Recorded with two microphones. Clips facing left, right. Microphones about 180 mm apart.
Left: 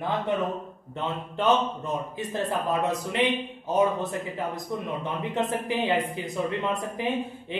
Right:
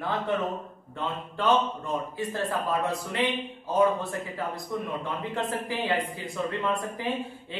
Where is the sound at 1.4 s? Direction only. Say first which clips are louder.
Left 1 dB; 20° left (ahead or behind).